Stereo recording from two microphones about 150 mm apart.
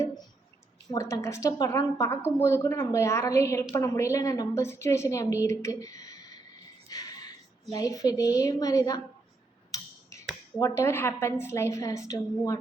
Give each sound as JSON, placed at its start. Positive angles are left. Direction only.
{"t": 0.9, "sound": "a woman's voice", "side_deg": 20}
{"t": 6.8, "sound": "a sound", "side_deg": 25}
{"t": 7.7, "sound": "a woman's voice", "side_deg": 25}
{"t": 9.7, "sound": "tick-tock", "side_deg": 20}
{"t": 10.6, "sound": "a woman's voice", "side_deg": 20}